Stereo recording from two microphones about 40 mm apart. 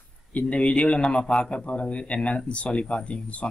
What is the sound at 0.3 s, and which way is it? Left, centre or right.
Speech, left.